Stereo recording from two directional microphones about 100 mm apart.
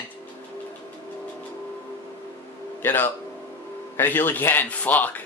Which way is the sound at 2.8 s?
20° left (ahead or behind).